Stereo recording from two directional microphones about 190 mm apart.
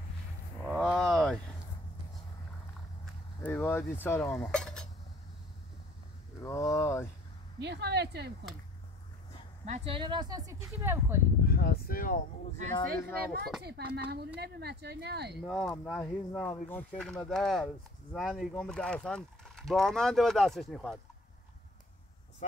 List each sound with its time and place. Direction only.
0.7 s a sound: centre (ahead or behind)
3.4 s cutlery: 10° left (ahead or behind)
6.4 s a sound: 15° left (ahead or behind)
7.5 s speech: 60° right (ahead or behind)
9.7 s speech: 30° right (ahead or behind); by 11.1 s 15° right (ahead or behind)
11.4 s speech: 55° left (ahead or behind)
13.6 s speech: 60° right (ahead or behind)
15.4 s speech: centre (ahead or behind)